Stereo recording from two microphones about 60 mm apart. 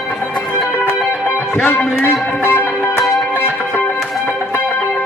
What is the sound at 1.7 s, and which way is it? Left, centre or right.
Speech, left.